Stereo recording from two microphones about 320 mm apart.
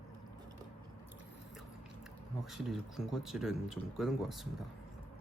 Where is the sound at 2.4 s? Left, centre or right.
Centre.